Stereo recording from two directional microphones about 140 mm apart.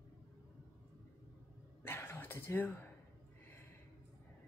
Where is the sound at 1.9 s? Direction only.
15° left (ahead or behind).